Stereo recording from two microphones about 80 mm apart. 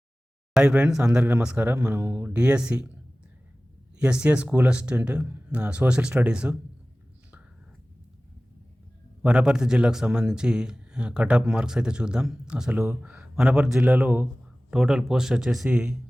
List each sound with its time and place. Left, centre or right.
0.5 s a man's voice: centre
1.5 s speech: centre
2.3 s a man's voice: centre
3.9 s a man's voice: centre
9.2 s a man's voice: centre
13.8 s speech: centre
14.7 s a man's voice: centre